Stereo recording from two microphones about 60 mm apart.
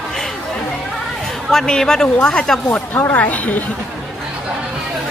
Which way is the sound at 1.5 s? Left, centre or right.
Centre.